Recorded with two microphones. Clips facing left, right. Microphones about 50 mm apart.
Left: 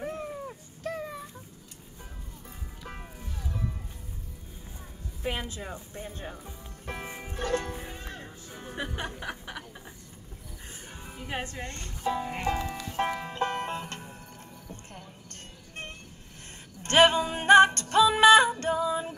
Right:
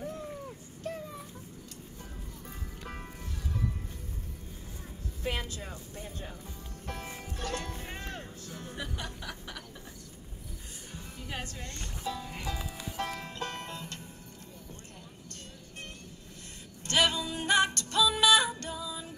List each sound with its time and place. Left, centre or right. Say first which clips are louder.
2.8 s music: left 1 dB; centre
5.2 s a woman's voice: left 2 dB; centre
5.9 s speech: left 3 dB; left
8.0 s music: right 1 dB; left
8.8 s a sound: left 7 dB; left
10.9 s speech: left 4 dB; left
12.9 s music: left 7 dB; left
16.8 s music: left 7 dB; left